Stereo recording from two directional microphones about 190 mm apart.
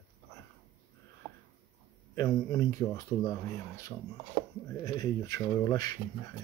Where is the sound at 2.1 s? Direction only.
15° left (ahead or behind).